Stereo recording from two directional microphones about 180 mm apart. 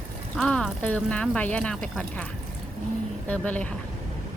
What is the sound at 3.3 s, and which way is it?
Speech, 10° left (ahead or behind).